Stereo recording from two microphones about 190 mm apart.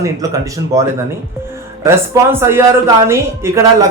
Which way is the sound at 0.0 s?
15° right (ahead or behind).